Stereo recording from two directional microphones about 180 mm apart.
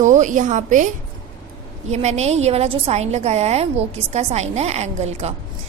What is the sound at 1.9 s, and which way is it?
A woman's voice, 40° right (ahead or behind).